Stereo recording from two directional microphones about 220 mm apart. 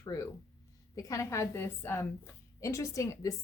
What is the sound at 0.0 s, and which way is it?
A woman's voice, 15° left (ahead or behind).